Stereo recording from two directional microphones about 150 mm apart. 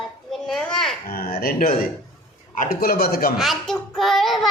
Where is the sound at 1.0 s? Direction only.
90° left.